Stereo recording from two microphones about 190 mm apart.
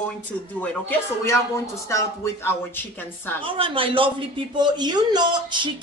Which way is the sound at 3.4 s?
30° right (ahead or behind).